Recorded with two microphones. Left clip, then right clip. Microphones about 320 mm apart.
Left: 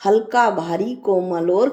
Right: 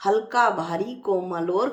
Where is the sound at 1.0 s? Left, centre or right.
Left.